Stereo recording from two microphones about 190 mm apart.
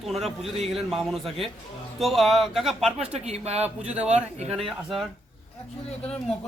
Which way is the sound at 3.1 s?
35° right (ahead or behind).